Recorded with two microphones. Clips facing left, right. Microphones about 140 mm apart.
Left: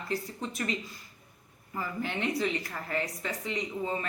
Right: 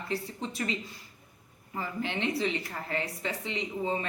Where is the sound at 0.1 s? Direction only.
30° right (ahead or behind).